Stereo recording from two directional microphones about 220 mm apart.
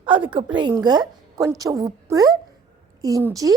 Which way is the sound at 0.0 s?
20° right (ahead or behind).